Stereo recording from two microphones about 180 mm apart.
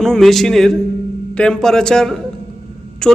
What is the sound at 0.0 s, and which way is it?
A man's voice, centre (ahead or behind).